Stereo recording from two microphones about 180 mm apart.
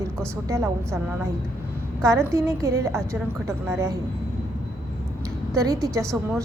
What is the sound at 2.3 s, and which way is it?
A woman's voice, 15° right (ahead or behind).